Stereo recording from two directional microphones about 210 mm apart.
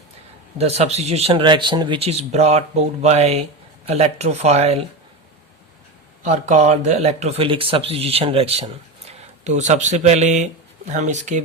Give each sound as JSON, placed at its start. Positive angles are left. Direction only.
{"t": 0.6, "sound": "speech", "side_deg": -30}
{"t": 6.2, "sound": "speech", "side_deg": -35}